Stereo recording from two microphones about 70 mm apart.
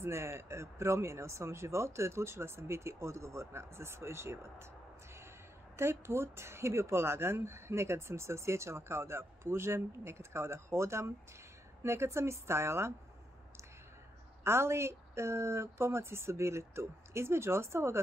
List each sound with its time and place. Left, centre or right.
0.0 s speech: right
5.8 s speech: right
14.4 s speech: right